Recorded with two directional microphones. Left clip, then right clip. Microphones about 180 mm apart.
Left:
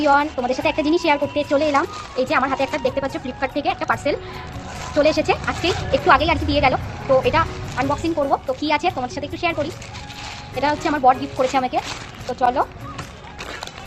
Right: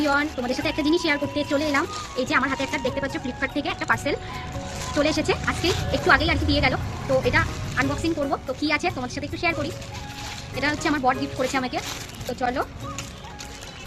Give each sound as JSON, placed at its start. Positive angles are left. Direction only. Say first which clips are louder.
{"t": 0.0, "sound": "a woman's voice", "louder": "left 6 dB", "side_deg": -15}